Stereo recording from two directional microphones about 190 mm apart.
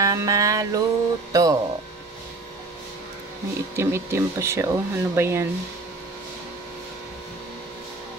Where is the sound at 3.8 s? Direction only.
15° right (ahead or behind).